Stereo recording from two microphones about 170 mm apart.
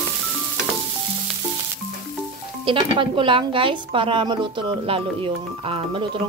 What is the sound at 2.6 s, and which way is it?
A woman's voice, 30° right (ahead or behind).